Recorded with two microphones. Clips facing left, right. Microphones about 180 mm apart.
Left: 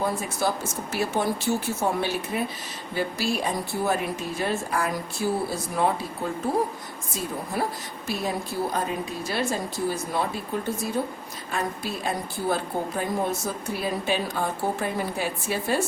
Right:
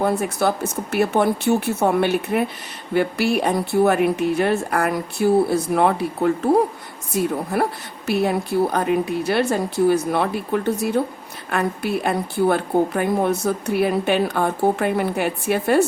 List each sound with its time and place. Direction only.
0.0 s a woman's voice: 65° right (ahead or behind)